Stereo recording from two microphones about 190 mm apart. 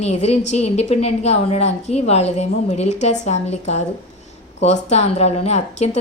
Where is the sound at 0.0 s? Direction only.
35° left (ahead or behind).